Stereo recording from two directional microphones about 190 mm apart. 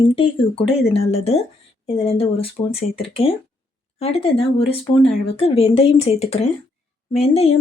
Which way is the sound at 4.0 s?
30° left (ahead or behind).